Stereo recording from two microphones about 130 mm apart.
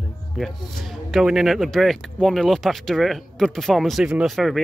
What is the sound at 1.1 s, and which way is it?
Speech, 5° right (ahead or behind).